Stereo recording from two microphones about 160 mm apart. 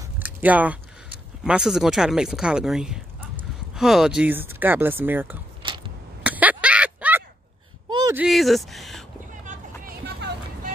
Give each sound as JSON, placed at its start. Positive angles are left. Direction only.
{"t": 0.2, "sound": "speech", "side_deg": -10}
{"t": 5.6, "sound": "a sound", "side_deg": -30}
{"t": 6.2, "sound": "a sound", "side_deg": -10}
{"t": 8.3, "sound": "speech", "side_deg": 0}
{"t": 9.4, "sound": "vehicle", "side_deg": -55}
{"t": 10.0, "sound": "vehicle", "side_deg": -80}